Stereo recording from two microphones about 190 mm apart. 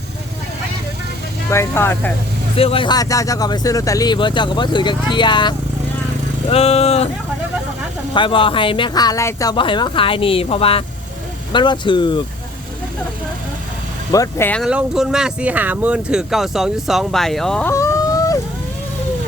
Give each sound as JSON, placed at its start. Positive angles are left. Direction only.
{"t": 1.5, "sound": "speech", "side_deg": 15}
{"t": 2.6, "sound": "speech", "side_deg": 30}
{"t": 8.1, "sound": "speech", "side_deg": 25}
{"t": 14.1, "sound": "speech", "side_deg": 15}
{"t": 14.6, "sound": "speech", "side_deg": -5}